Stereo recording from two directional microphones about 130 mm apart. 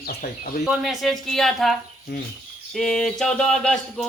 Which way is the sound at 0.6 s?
Centre (ahead or behind).